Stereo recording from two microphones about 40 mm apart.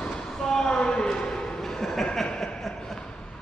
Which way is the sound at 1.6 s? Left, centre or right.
Centre.